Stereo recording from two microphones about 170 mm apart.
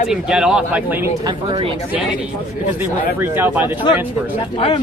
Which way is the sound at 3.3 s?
10° right (ahead or behind).